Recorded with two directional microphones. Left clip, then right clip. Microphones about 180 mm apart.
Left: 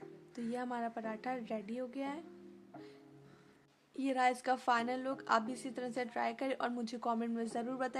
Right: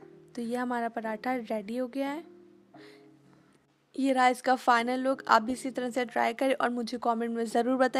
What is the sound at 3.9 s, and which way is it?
A woman's voice, 40° right (ahead or behind).